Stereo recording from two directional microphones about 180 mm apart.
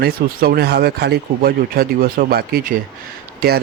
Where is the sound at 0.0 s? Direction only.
60° right (ahead or behind).